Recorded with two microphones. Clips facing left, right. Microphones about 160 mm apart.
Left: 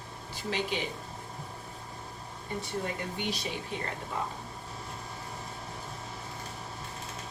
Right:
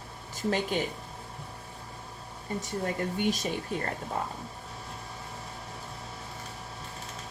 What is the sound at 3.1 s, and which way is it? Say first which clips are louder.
Speech: right 6 dB; 45° right (ahead or behind).